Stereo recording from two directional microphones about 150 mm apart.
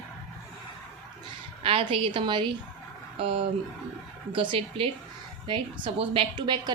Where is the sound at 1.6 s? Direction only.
35° right (ahead or behind).